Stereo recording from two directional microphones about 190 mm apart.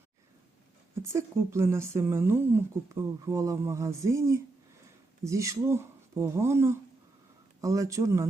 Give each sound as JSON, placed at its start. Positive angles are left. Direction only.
{"t": 1.0, "sound": "speech", "side_deg": -15}